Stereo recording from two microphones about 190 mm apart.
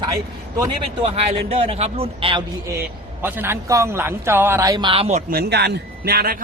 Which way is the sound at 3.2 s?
10° right (ahead or behind).